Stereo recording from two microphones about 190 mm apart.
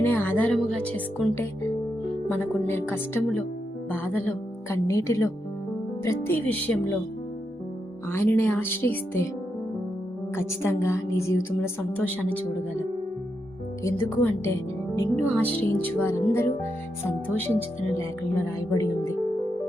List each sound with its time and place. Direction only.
0.0 s music: 10° left (ahead or behind)
0.9 s a woman's voice: 10° left (ahead or behind)
8.1 s a woman's voice: 15° left (ahead or behind)
10.3 s a woman's voice: 15° left (ahead or behind)
13.8 s a woman's voice: 10° left (ahead or behind)